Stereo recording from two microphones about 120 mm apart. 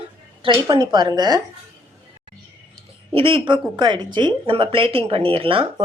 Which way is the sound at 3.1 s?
45° right (ahead or behind).